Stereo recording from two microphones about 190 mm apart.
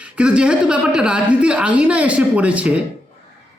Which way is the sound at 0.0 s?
5° right (ahead or behind).